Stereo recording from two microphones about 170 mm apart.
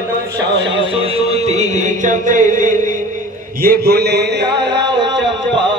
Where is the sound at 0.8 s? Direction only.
35° right (ahead or behind).